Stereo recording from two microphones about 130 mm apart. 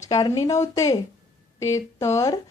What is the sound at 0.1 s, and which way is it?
Speech, 30° left (ahead or behind).